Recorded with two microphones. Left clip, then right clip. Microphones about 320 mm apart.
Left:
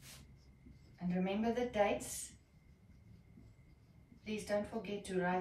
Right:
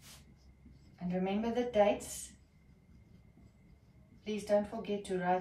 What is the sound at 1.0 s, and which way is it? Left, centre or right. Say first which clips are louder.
Speech: right 2 dB; centre.